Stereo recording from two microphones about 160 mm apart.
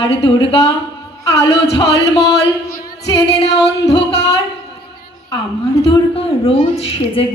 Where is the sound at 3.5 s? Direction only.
90° left.